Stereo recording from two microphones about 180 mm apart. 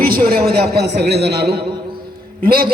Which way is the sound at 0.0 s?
55° right (ahead or behind).